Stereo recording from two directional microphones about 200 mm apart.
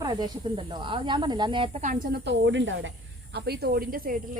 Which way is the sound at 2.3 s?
65° right (ahead or behind).